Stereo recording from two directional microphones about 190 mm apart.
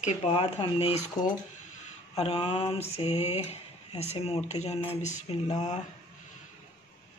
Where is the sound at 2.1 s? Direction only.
30° left (ahead or behind).